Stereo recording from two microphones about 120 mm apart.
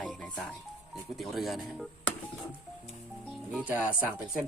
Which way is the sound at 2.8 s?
Centre (ahead or behind).